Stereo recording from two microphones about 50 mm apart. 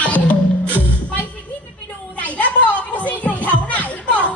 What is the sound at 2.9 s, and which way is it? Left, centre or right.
Music, left.